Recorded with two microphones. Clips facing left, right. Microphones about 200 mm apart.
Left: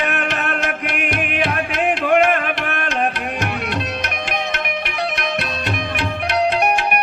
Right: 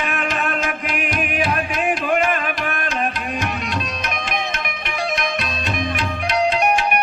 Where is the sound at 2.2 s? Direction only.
60° left (ahead or behind).